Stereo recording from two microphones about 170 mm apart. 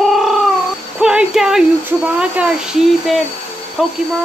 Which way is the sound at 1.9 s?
5° right (ahead or behind).